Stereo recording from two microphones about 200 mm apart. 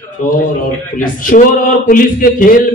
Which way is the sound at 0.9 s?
45° left (ahead or behind).